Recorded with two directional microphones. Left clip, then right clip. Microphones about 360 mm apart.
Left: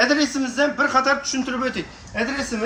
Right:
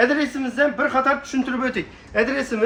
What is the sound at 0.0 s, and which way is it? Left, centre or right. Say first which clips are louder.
Speech: even; centre.